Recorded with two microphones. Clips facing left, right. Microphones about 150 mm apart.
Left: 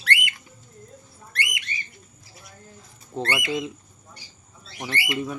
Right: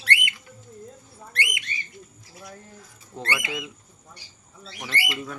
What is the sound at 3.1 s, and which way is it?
Speech, 25° left (ahead or behind).